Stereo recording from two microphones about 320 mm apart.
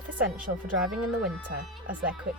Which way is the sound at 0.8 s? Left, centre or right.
Centre.